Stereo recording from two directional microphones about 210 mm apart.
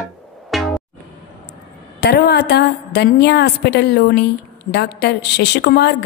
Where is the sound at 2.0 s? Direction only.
50° left (ahead or behind).